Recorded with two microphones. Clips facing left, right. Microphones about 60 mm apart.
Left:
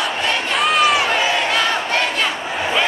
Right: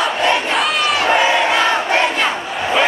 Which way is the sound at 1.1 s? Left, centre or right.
Right.